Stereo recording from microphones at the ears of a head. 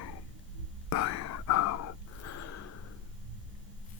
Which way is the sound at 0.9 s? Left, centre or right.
Left.